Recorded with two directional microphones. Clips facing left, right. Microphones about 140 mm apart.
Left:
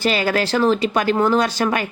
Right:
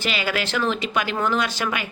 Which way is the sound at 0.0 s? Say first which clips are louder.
Left 6 dB; 40° left (ahead or behind).